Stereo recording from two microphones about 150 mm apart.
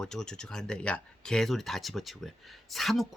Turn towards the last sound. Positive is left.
turn(degrees=0)  # may be behind; listen again after turning